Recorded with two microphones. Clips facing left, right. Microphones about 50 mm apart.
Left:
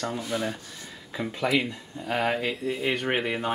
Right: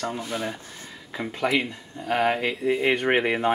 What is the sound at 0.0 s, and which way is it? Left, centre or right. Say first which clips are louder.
Speech: even; right.